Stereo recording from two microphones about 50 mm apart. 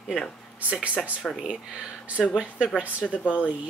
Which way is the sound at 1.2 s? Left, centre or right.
Centre.